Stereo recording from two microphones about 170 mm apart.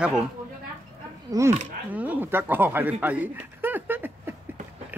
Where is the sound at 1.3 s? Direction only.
20° right (ahead or behind).